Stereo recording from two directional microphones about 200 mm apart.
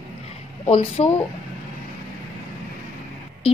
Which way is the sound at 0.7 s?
30° left (ahead or behind).